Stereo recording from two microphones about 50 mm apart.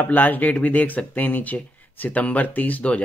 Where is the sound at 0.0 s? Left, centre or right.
Left.